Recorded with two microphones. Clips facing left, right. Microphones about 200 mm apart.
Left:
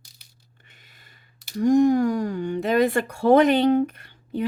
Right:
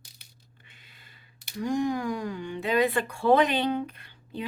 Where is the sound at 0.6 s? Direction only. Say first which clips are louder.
Left 2 dB; 45° left (ahead or behind).